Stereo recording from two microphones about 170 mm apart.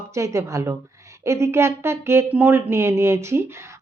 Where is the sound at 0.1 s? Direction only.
15° right (ahead or behind).